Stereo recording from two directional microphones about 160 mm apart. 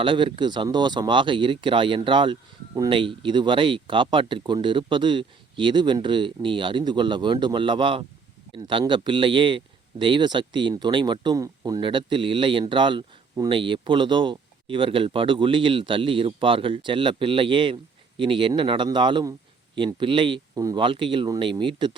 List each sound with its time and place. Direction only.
0.0 s speech: 30° right (ahead or behind)